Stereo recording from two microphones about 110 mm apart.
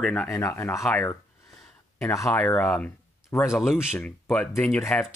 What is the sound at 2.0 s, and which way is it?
Speech, 30° left (ahead or behind).